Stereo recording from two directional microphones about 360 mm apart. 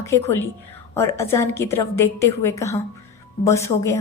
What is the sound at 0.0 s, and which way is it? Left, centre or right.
A woman's voice, centre.